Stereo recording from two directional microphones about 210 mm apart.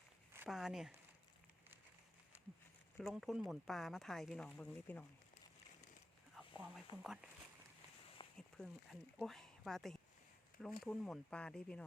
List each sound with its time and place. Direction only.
0.3 s speech: centre (ahead or behind)
3.0 s speech: centre (ahead or behind)
6.3 s speech: centre (ahead or behind)
8.4 s speech: centre (ahead or behind)